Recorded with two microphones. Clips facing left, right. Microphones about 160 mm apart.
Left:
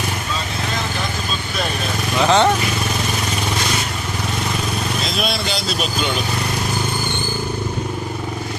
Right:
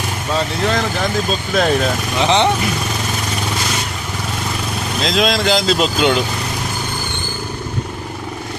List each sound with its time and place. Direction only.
2.2 s speech: 20° right (ahead or behind)
5.0 s speech: 90° right